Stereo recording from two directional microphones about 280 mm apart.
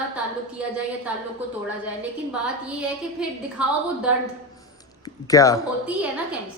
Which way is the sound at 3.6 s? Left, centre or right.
Centre.